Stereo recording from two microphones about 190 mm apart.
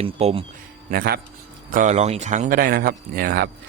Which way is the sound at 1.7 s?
40° right (ahead or behind).